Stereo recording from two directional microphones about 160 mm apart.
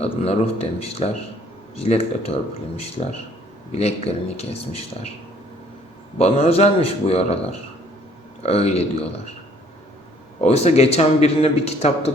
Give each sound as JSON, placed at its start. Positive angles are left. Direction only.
{"t": 0.0, "sound": "speech", "side_deg": 40}
{"t": 6.1, "sound": "speech", "side_deg": 40}
{"t": 8.4, "sound": "speech", "side_deg": 40}
{"t": 10.4, "sound": "speech", "side_deg": 40}